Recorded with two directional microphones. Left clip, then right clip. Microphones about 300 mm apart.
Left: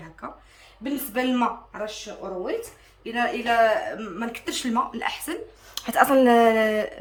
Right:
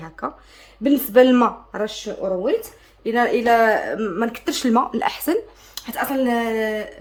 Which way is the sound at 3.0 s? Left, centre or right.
Right.